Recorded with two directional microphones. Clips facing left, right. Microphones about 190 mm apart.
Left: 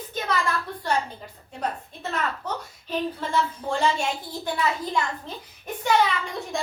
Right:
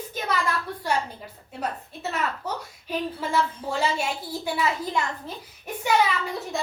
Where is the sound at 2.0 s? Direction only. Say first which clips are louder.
Even; 5° right (ahead or behind).